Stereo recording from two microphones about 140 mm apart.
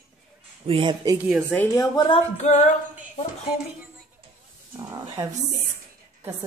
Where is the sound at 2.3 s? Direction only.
55° left (ahead or behind).